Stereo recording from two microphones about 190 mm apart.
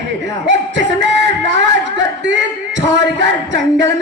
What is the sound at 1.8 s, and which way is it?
Speech, 70° right (ahead or behind).